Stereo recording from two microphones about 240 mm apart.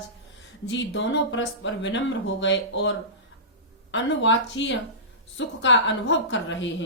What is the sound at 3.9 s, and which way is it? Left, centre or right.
A woman's voice, left.